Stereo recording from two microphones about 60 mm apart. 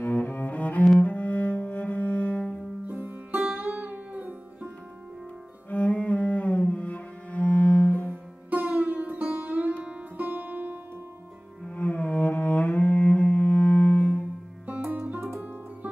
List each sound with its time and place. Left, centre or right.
0.0 s cello: left
3.0 s music: right
3.5 s music: right
5.7 s cello: left
8.1 s sitar: right
10.2 s music: right
11.7 s cello: left
14.8 s music: right